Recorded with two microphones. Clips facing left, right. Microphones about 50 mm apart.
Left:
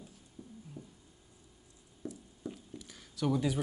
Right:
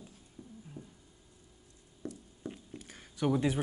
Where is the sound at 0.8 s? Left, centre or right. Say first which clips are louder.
Right 1 dB; right.